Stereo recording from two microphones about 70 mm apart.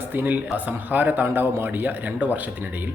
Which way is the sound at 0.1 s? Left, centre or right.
Right.